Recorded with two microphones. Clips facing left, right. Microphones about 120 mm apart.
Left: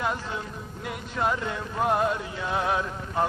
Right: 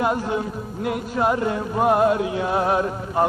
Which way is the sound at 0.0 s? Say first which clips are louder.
Right 8 dB; 50° right (ahead or behind).